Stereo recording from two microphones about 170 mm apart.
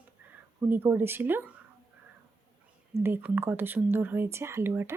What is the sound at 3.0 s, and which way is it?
Speech, 10° right (ahead or behind).